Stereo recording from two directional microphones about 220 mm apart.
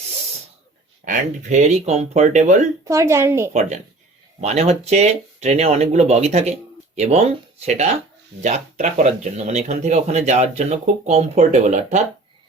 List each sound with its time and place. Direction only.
1.0 s speech: 35° right (ahead or behind)
2.8 s a woman's voice: 15° right (ahead or behind)
3.5 s speech: 30° right (ahead or behind)